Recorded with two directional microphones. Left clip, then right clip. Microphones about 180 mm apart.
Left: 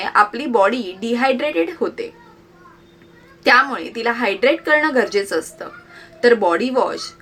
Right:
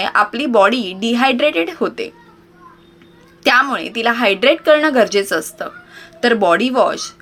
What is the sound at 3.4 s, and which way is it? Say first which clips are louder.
A woman's voice: right 1 dB; 40° right (ahead or behind).